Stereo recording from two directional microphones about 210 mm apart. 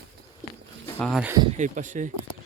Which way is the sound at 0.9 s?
Centre (ahead or behind).